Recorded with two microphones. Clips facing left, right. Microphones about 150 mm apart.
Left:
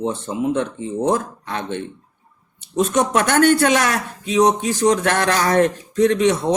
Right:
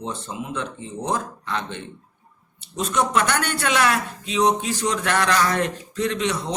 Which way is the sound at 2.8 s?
45° left (ahead or behind).